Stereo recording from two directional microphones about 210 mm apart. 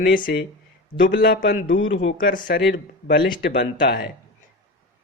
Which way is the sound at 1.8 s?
60° left (ahead or behind).